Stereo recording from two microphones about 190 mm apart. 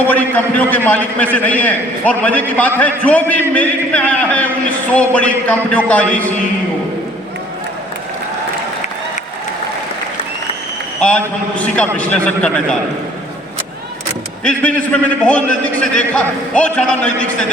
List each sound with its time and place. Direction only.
0.1 s a man's voice: 10° left (ahead or behind)
11.0 s a man's voice: 5° left (ahead or behind)
14.4 s a man's voice: 5° left (ahead or behind)